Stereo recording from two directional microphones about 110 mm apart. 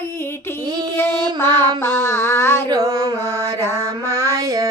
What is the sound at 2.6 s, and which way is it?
Carnatic music, 35° right (ahead or behind).